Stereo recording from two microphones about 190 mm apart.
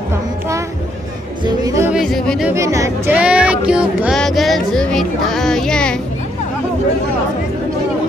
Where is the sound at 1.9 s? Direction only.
Centre (ahead or behind).